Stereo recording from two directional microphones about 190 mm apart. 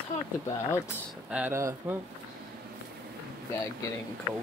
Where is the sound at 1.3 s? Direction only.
10° right (ahead or behind).